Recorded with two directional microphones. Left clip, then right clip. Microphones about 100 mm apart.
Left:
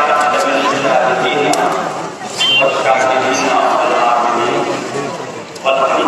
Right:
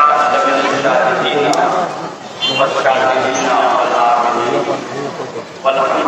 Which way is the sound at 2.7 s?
25° right (ahead or behind).